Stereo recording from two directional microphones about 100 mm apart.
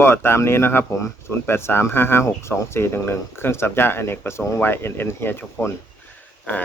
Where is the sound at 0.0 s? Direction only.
25° left (ahead or behind).